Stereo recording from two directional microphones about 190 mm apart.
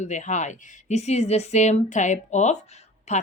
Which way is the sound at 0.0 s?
40° left (ahead or behind).